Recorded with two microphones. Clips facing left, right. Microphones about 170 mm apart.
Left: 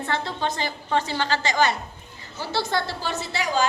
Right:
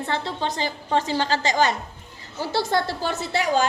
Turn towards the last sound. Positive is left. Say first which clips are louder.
# right 2 dB
turn(degrees=-55)  # may be behind; listen again after turning